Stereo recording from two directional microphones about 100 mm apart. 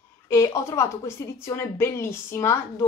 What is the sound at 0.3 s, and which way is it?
Speech, 30° left (ahead or behind).